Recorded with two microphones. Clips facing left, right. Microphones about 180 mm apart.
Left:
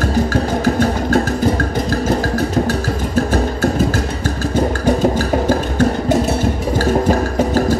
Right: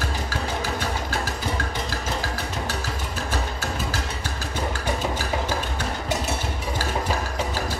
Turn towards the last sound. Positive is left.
turn(degrees=45)  # may be behind; listen again after turning